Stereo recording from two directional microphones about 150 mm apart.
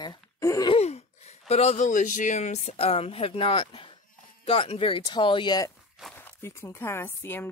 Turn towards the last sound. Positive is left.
turn(degrees=15)  # may be behind; listen again after turning